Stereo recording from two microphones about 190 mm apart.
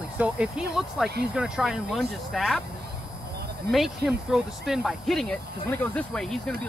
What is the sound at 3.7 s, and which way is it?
Speech, centre (ahead or behind).